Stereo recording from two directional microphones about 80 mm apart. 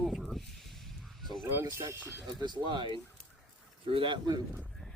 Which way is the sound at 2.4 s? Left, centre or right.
Right.